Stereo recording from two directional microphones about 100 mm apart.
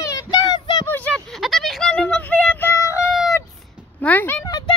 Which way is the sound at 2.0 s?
15° left (ahead or behind).